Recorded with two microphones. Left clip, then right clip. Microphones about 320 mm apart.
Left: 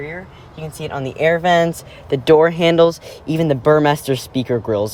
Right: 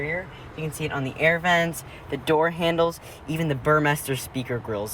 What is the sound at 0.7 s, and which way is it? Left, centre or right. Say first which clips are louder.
Speech: left 5 dB; left.